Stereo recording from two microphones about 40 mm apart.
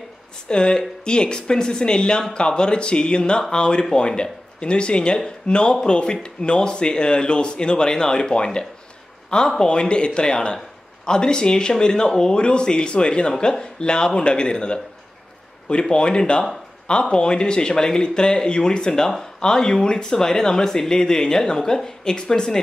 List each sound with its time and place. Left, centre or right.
0.5 s speech: left
15.8 s speech: left